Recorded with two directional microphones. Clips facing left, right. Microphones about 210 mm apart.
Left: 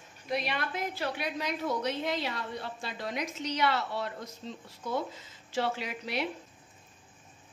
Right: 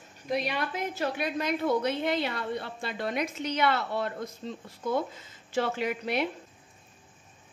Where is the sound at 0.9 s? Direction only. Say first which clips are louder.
Right 4 dB; 55° right (ahead or behind).